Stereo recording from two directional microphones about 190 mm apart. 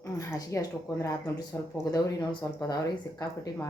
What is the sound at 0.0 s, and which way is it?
Speech, 15° left (ahead or behind).